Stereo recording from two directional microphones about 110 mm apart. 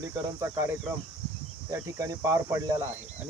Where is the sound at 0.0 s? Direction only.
30° right (ahead or behind).